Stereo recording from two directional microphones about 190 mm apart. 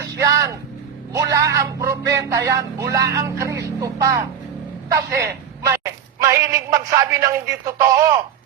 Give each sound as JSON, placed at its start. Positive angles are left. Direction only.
{"t": 0.2, "sound": "vehicle", "side_deg": -15}
{"t": 1.1, "sound": "speech", "side_deg": -15}